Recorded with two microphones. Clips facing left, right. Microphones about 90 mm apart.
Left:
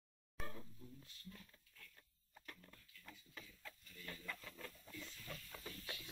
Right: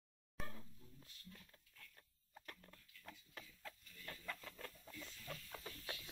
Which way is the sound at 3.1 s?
45° right (ahead or behind).